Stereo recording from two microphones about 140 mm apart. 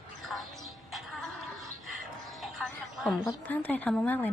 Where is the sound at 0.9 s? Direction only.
Centre (ahead or behind).